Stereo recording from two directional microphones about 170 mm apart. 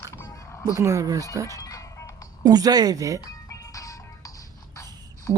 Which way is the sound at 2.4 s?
20° right (ahead or behind).